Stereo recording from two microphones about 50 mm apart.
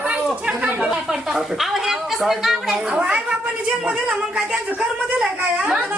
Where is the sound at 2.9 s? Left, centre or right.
Right.